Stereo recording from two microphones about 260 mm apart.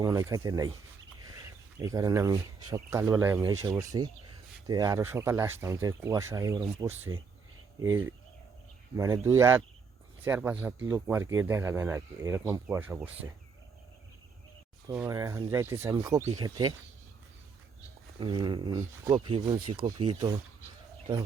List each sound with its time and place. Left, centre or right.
0.0 s speech: centre
1.8 s speech: centre
14.8 s speech: centre
18.2 s speech: centre